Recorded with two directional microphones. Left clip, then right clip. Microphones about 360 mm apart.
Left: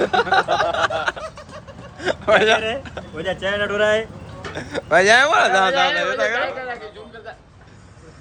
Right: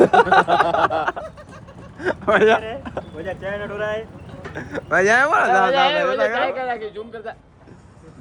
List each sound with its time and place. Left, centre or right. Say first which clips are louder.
0.0 s a sound: right 4 dB; centre
3.2 s speech: left 8 dB; left
4.5 s speech: left 3 dB; centre